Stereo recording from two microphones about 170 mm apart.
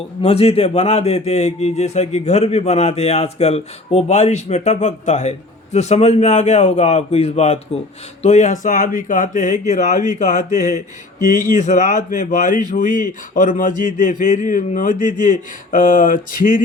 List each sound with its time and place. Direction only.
0.2 s speech: 35° left (ahead or behind)
11.3 s speech: 50° left (ahead or behind)